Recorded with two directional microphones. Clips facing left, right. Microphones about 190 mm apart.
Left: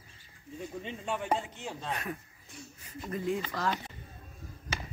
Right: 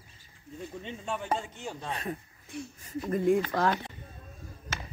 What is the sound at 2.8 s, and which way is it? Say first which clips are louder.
Speech: right 7 dB; 50° right (ahead or behind).